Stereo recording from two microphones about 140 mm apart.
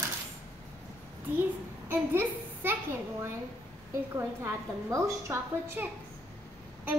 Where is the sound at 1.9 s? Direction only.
15° right (ahead or behind).